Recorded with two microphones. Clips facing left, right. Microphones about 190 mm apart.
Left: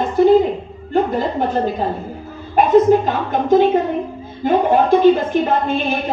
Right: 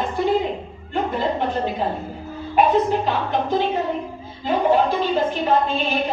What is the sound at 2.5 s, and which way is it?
A woman's voice, 45° left (ahead or behind).